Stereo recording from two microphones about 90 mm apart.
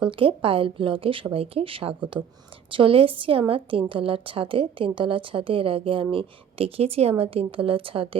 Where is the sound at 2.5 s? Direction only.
75° right (ahead or behind).